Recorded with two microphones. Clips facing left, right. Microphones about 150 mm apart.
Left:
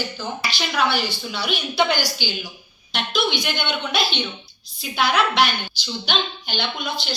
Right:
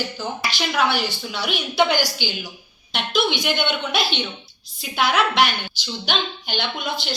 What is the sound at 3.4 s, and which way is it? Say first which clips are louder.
A woman's voice: right 3 dB; 55° right (ahead or behind).